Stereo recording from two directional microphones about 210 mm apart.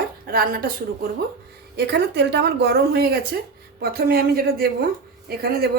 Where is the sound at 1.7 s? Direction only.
55° right (ahead or behind).